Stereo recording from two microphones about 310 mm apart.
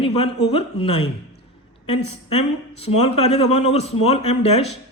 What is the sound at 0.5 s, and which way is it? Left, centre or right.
Speech, centre.